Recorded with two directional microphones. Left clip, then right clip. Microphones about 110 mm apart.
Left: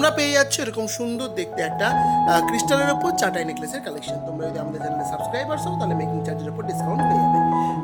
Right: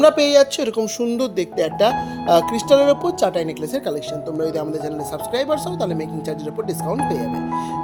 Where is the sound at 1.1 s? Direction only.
50° right (ahead or behind).